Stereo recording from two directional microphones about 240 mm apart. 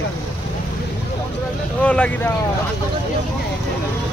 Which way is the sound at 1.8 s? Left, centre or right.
Centre.